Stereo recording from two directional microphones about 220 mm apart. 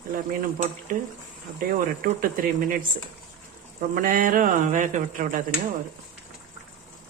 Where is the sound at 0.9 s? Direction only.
35° right (ahead or behind).